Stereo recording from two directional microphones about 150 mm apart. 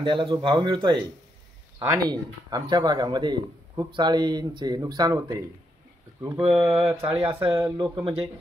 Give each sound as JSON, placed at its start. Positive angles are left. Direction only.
{"t": 0.0, "sound": "speech", "side_deg": -35}
{"t": 6.5, "sound": "mantra", "side_deg": -15}
{"t": 7.3, "sound": "speech", "side_deg": -35}